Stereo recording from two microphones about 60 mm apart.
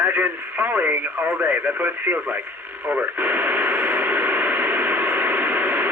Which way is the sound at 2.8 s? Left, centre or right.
Right.